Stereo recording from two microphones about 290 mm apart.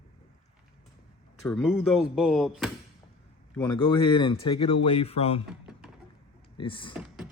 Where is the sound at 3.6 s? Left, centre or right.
Centre.